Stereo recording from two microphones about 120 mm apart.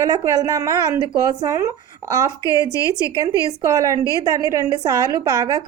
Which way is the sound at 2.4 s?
30° left (ahead or behind).